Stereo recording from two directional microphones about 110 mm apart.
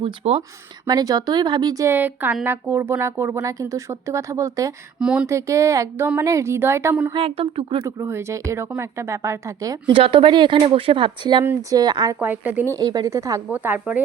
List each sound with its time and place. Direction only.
0.0 s speech: 65° right (ahead or behind)
0.9 s speech: 35° right (ahead or behind)
2.0 s speech: 15° right (ahead or behind)
4.9 s speech: 5° right (ahead or behind)
5.2 s speech: 25° right (ahead or behind)
7.1 s speech: 60° right (ahead or behind)
7.9 s speech: 25° right (ahead or behind)
9.9 s speech: 50° right (ahead or behind)
12.2 s speech: 15° right (ahead or behind)
12.7 s speech: 35° right (ahead or behind)
13.5 s speech: 15° right (ahead or behind)